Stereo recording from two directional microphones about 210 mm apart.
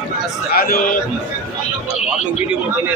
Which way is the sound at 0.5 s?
45° left (ahead or behind).